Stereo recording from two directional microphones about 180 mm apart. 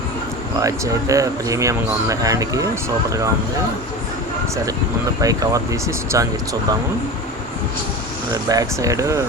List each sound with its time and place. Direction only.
0.6 s speech: 20° right (ahead or behind)
5.2 s speech: 20° right (ahead or behind)
8.3 s speech: 20° right (ahead or behind)